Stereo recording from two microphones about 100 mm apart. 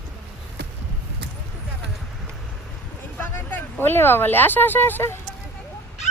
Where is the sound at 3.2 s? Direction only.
20° left (ahead or behind).